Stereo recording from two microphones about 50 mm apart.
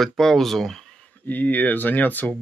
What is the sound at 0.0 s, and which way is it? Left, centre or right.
Speech, centre.